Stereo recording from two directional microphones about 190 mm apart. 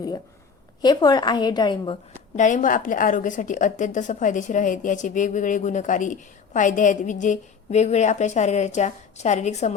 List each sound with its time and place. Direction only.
0.8 s a woman's voice: 20° left (ahead or behind)
2.3 s a woman's voice: 40° left (ahead or behind)